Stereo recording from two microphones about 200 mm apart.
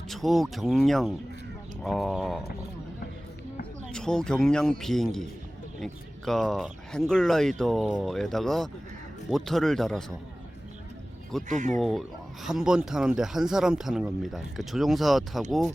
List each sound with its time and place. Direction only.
0.1 s speech: centre (ahead or behind)
3.9 s speech: 5° left (ahead or behind)
11.4 s speech: 40° right (ahead or behind)
11.8 s speech: centre (ahead or behind)